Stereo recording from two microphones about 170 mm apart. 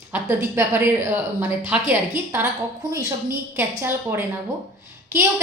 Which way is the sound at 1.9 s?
10° right (ahead or behind).